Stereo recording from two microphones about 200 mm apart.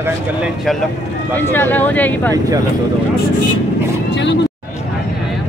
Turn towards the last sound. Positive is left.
turn(degrees=65)  # may be behind; listen again after turning